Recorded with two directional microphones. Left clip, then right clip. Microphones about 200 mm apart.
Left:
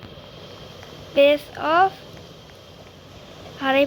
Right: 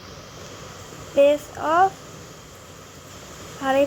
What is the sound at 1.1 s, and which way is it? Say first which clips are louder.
Speech: left 1 dB; 10° left (ahead or behind).